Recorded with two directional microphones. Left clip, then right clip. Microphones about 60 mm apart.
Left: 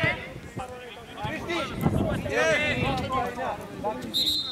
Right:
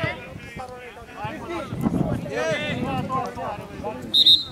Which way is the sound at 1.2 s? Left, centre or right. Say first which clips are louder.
Left 1 dB; centre.